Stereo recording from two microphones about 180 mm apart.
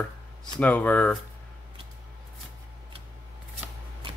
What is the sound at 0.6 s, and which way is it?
Speech, 10° left (ahead or behind).